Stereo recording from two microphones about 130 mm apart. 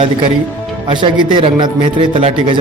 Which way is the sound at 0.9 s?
40° right (ahead or behind).